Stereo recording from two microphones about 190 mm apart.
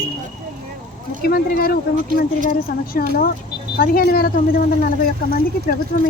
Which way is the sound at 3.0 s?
50° left (ahead or behind).